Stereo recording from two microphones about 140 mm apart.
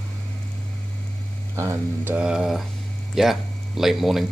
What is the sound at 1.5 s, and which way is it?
Speech, 20° right (ahead or behind).